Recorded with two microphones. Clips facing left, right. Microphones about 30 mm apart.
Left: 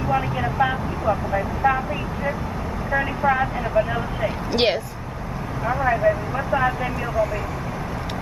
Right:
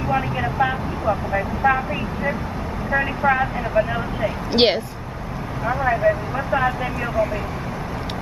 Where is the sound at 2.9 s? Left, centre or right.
Centre.